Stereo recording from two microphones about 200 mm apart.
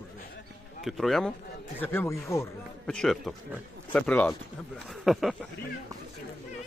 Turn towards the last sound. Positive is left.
turn(degrees=0)  # may be behind; listen again after turning